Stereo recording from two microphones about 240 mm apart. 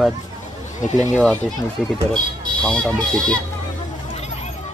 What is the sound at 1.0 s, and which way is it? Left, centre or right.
Speech, centre.